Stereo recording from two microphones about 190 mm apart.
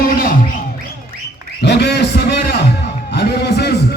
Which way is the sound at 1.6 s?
60° left (ahead or behind).